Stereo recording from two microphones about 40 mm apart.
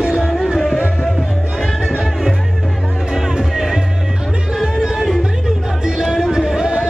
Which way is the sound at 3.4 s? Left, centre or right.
Centre.